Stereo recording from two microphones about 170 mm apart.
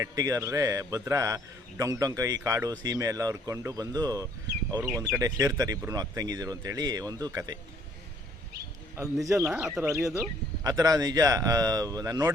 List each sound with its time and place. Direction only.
0.0 s a man's voice: 20° right (ahead or behind)
9.2 s speech: 20° right (ahead or behind)
9.5 s speech: 5° right (ahead or behind)
10.6 s a man's voice: 20° right (ahead or behind)